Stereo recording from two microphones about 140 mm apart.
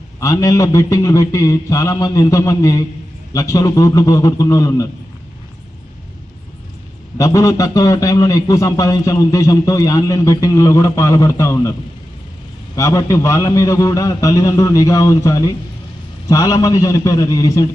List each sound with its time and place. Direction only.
0.2 s a man's voice: 25° left (ahead or behind)
7.2 s a man's voice: 25° left (ahead or behind)
12.7 s a man's voice: 25° left (ahead or behind)